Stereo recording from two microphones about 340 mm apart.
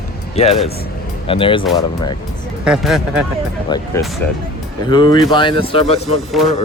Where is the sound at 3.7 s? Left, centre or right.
Centre.